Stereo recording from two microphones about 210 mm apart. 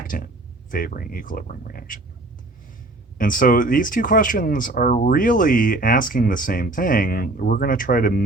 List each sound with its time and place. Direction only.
0.1 s speech: 45° left (ahead or behind)
3.2 s speech: 40° left (ahead or behind)